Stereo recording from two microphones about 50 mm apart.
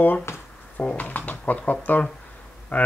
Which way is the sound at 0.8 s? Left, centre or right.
Left.